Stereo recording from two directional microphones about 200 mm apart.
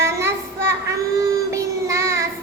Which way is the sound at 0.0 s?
15° right (ahead or behind).